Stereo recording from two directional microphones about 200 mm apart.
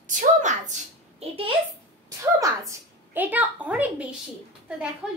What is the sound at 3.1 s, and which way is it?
Speech, 10° right (ahead or behind).